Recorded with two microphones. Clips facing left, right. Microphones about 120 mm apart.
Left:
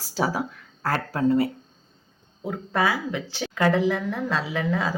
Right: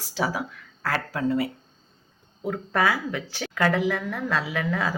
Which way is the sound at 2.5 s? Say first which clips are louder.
Even; 20° left (ahead or behind).